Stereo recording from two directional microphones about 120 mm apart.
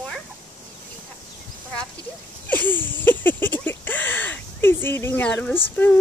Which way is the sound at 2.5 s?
15° left (ahead or behind).